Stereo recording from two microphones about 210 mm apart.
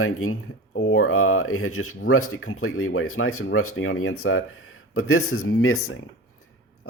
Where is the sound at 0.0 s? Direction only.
80° left.